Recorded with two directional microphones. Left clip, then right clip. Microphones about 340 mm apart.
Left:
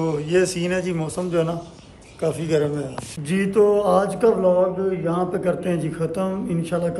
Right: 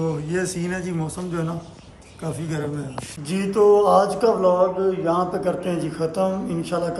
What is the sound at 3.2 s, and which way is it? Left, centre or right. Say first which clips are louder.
A man's voice: even; centre.